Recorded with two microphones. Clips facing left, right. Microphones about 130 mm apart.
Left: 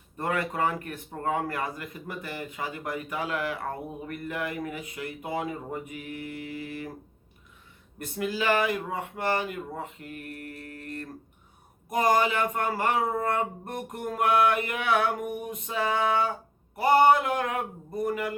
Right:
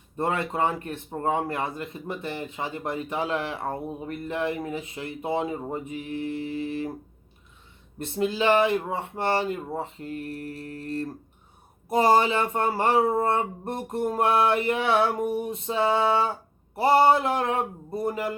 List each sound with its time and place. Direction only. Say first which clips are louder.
0.2 s a man's voice: right 2 dB; 25° right (ahead or behind)
7.9 s a man's voice: right 4 dB; 25° right (ahead or behind)